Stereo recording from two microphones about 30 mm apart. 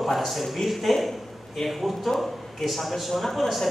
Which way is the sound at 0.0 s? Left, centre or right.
Centre.